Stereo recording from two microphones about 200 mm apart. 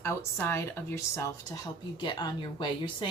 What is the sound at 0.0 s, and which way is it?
A woman's voice, 10° left (ahead or behind).